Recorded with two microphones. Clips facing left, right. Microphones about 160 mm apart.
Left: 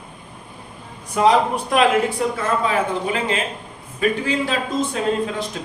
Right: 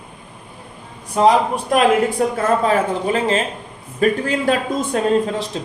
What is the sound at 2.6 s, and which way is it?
Speech, 40° right (ahead or behind).